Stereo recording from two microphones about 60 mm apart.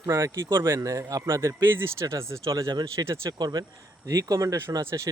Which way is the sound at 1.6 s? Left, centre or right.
Right.